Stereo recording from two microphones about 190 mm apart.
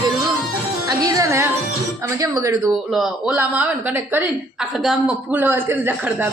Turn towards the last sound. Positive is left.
turn(degrees=-10)  # may be behind; listen again after turning